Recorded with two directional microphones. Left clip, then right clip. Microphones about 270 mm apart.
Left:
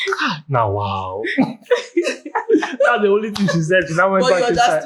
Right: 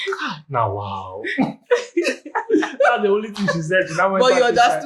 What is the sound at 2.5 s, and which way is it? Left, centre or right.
Chuckle, left.